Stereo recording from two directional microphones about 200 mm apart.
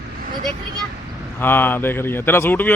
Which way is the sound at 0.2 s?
45° right (ahead or behind).